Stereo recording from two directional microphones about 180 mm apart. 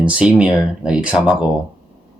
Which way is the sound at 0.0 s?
5° right (ahead or behind).